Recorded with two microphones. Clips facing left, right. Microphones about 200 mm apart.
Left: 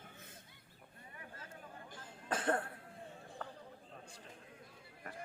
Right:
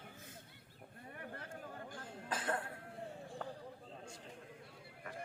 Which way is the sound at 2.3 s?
50° left (ahead or behind).